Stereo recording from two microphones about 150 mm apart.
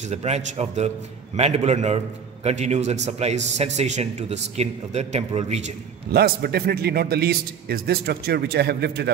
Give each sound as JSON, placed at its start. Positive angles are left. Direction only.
{"t": 0.0, "sound": "a man's voice", "side_deg": -45}
{"t": 6.1, "sound": "a man's voice", "side_deg": -90}